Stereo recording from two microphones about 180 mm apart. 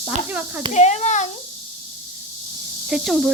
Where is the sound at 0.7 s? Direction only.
40° left (ahead or behind).